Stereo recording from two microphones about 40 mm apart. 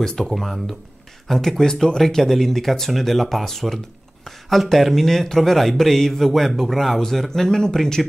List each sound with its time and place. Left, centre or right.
0.0 s speech: centre
0.3 s speech: centre